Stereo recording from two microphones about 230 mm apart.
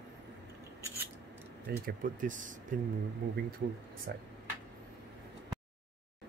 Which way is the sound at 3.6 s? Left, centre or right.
Right.